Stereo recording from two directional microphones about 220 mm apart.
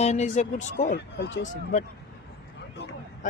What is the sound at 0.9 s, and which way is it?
Speech, 50° left (ahead or behind).